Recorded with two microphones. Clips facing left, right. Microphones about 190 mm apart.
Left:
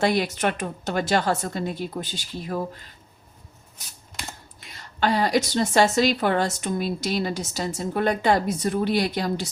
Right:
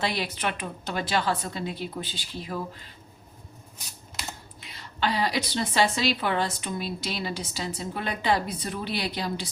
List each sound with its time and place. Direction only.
0.0 s a woman's voice: 45° left (ahead or behind)
4.2 s computer keyboard: centre (ahead or behind)
4.6 s a woman's voice: 45° left (ahead or behind)